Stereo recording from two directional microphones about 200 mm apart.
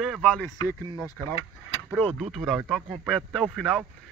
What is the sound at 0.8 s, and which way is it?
Speech, 20° right (ahead or behind).